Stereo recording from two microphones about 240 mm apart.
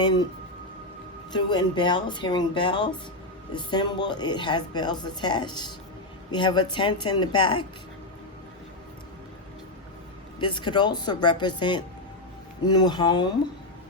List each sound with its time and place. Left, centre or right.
0.0 s a woman's voice: centre
1.3 s a woman's voice: centre
10.4 s a woman's voice: centre